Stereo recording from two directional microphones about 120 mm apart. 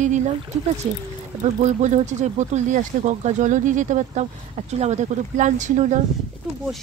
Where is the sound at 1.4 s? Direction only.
80° right.